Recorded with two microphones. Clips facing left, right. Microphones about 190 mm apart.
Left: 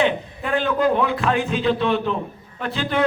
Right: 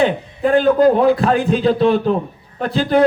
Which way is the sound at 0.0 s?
35° right (ahead or behind).